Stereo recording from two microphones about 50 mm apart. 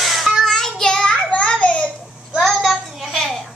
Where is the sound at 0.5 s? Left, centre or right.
Centre.